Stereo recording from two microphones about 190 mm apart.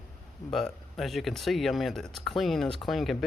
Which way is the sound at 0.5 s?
Centre (ahead or behind).